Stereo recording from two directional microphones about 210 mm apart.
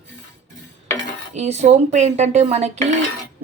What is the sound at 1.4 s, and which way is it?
A woman's voice, 30° right (ahead or behind).